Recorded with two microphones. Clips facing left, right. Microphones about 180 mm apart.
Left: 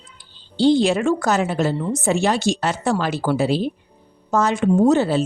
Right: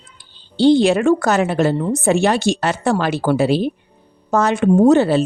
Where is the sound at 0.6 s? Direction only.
65° right (ahead or behind).